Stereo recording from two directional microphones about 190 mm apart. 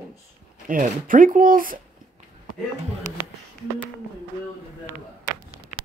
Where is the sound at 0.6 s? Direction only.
45° right (ahead or behind).